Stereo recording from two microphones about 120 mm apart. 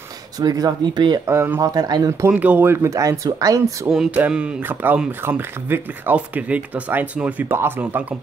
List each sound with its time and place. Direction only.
0.4 s speech: 30° right (ahead or behind)
1.3 s speech: 20° right (ahead or behind)
2.2 s speech: 10° right (ahead or behind); by 3.9 s 30° right (ahead or behind)
3.9 s speech: 5° right (ahead or behind)